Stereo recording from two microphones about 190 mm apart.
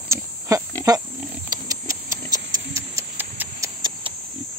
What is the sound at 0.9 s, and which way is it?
Pig, 20° right (ahead or behind).